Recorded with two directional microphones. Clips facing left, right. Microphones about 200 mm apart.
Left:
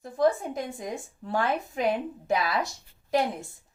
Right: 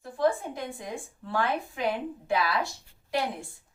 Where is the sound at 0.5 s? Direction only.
45° left (ahead or behind).